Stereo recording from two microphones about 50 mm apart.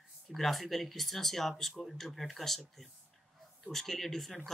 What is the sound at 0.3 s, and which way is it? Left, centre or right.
Speech, centre.